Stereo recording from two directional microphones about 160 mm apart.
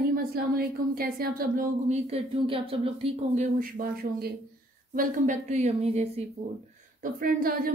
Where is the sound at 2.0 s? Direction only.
35° right (ahead or behind).